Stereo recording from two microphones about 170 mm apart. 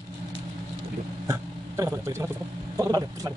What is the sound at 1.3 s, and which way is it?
Speech, 15° right (ahead or behind).